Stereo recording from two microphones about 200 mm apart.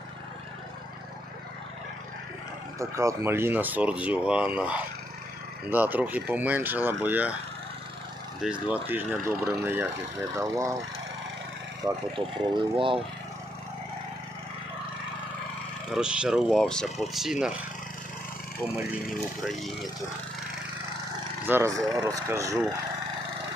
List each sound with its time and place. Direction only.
2.7 s speech: 15° right (ahead or behind)
8.6 s speech: 10° right (ahead or behind)
12.1 s speech: 25° right (ahead or behind)
15.9 s speech: 5° right (ahead or behind)
18.8 s speech: centre (ahead or behind)
21.4 s speech: 10° right (ahead or behind)